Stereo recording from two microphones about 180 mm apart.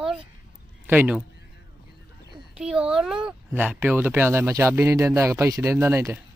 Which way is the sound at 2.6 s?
5° right (ahead or behind).